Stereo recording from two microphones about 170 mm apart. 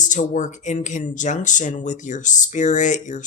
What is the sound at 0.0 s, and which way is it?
Speech, 45° left (ahead or behind).